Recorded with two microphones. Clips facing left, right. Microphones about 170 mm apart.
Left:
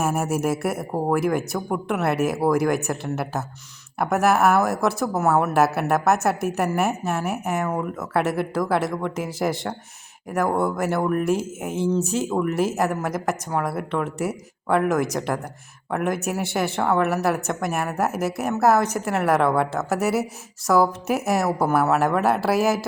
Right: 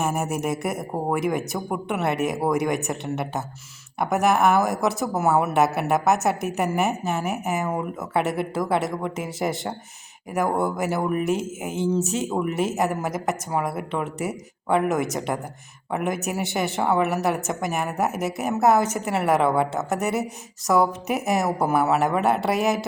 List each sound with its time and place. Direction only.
0.0 s a woman's voice: 5° left (ahead or behind)